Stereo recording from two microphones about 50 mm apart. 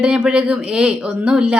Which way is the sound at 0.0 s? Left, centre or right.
Right.